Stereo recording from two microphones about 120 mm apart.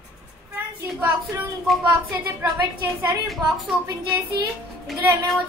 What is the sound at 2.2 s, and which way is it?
Speech, 20° right (ahead or behind).